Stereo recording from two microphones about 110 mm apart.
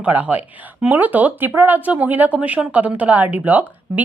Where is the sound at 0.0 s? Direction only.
15° right (ahead or behind).